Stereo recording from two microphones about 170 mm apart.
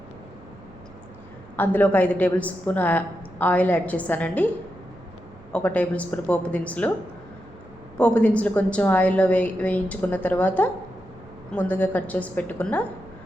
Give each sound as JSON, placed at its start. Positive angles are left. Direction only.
{"t": 1.5, "sound": "a woman's voice", "side_deg": 10}
{"t": 5.5, "sound": "a woman's voice", "side_deg": 10}
{"t": 7.9, "sound": "a woman's voice", "side_deg": 10}